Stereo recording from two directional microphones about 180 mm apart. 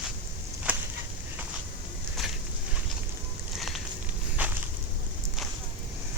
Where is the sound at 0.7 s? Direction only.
10° right (ahead or behind).